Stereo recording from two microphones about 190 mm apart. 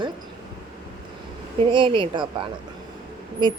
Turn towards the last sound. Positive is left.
turn(degrees=-25)  # may be behind; listen again after turning